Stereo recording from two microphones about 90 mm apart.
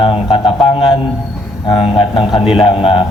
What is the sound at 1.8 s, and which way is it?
Speech, 70° left (ahead or behind).